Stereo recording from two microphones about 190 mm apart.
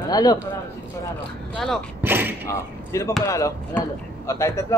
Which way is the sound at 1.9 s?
10° right (ahead or behind).